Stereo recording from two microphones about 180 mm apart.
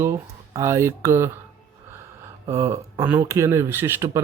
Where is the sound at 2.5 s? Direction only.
15° right (ahead or behind).